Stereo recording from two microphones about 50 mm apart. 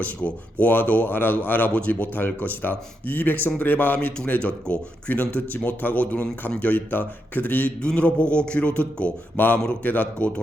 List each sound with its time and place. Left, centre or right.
0.6 s speech: left
7.8 s speech: left